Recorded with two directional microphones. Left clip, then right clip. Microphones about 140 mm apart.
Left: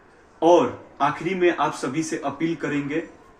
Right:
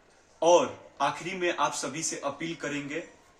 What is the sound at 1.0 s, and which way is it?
A man's voice, 30° right (ahead or behind).